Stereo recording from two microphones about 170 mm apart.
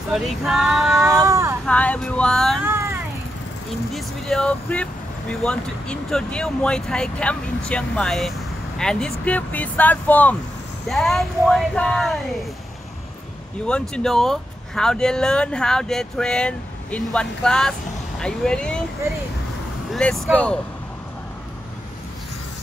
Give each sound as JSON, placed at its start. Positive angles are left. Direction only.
{"t": 0.1, "sound": "speech", "side_deg": 0}
{"t": 1.2, "sound": "vehicle", "side_deg": -15}
{"t": 1.7, "sound": "speech", "side_deg": 10}
{"t": 2.6, "sound": "vehicle", "side_deg": -15}
{"t": 3.9, "sound": "speech", "side_deg": 5}
{"t": 13.7, "sound": "speech", "side_deg": 5}
{"t": 19.9, "sound": "speech", "side_deg": 5}